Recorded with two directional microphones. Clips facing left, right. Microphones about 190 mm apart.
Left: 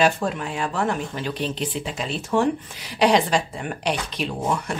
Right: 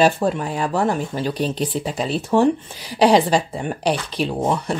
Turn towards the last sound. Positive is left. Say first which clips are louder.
# right 4 dB
turn(degrees=-30)  # may be behind; listen again after turning